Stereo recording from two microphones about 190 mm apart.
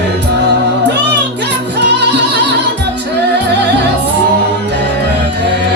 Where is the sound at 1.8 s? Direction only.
60° right (ahead or behind).